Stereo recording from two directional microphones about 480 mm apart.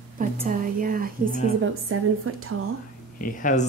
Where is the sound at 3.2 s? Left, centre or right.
Centre.